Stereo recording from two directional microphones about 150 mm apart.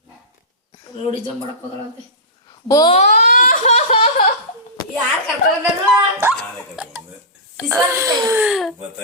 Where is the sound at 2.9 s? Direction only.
50° left (ahead or behind).